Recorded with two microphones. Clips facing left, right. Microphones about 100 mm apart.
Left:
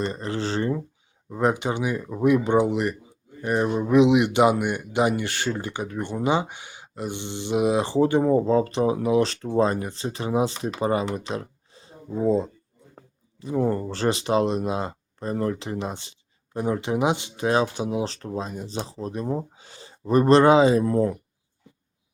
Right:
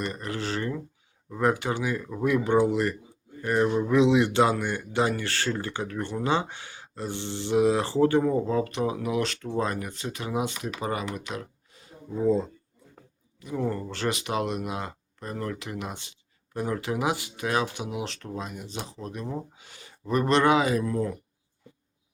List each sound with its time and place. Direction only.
0.0 s speech: 30° left (ahead or behind)
13.0 s speech: 35° left (ahead or behind)